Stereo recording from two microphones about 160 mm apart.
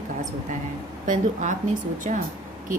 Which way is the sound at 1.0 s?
55° right (ahead or behind).